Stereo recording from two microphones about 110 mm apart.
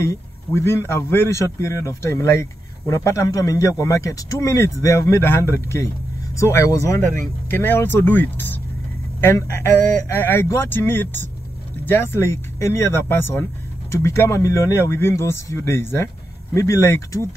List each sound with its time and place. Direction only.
0.0 s a man's voice: 25° left (ahead or behind)